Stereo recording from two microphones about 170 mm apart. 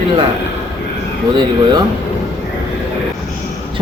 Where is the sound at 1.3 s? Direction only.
25° right (ahead or behind).